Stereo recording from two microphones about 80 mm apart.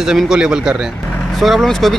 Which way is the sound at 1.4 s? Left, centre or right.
Centre.